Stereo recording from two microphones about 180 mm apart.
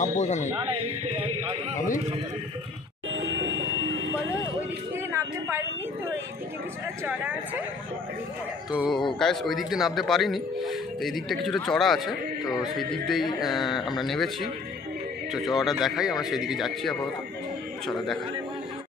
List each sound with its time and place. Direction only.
0.0 s speech: 40° left (ahead or behind)
0.6 s a man's voice: 30° right (ahead or behind)
3.1 s vehicle: 80° right
5.1 s a woman's voice: 15° right (ahead or behind)
8.7 s a man's voice: 5° right (ahead or behind)